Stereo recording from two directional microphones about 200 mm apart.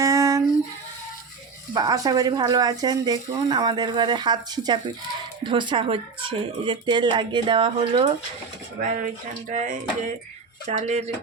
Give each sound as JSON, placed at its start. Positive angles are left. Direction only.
{"t": 0.0, "sound": "a sound", "side_deg": -15}
{"t": 1.7, "sound": "speech", "side_deg": -20}
{"t": 8.8, "sound": "speech", "side_deg": -40}